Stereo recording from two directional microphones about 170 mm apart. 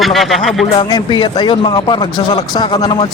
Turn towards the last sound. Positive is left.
turn(degrees=25)  # may be behind; listen again after turning